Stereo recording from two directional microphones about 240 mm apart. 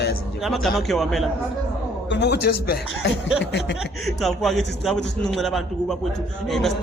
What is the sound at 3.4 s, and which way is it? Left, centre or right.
Speech, left.